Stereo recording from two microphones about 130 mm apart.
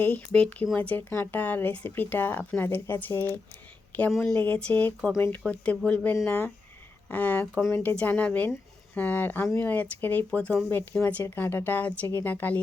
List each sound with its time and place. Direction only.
0.3 s speech: 5° left (ahead or behind)
4.1 s speech: 5° left (ahead or behind)